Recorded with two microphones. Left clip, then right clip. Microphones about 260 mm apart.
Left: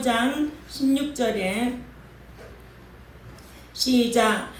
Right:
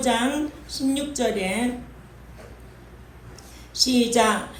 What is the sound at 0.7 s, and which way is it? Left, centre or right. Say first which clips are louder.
Speech: left 1 dB; right.